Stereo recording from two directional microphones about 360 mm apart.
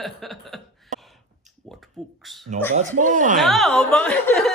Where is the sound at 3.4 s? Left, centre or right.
Centre.